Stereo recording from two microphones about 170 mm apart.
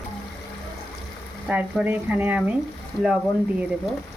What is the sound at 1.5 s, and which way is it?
Speech, 10° right (ahead or behind).